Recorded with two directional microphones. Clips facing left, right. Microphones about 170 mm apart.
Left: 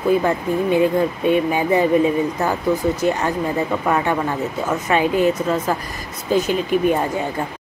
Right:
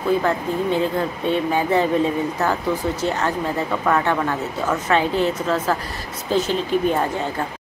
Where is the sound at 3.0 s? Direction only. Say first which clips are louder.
Left 2 dB; 10° left (ahead or behind).